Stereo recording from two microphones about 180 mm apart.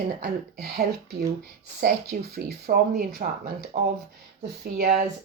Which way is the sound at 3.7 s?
35° right (ahead or behind).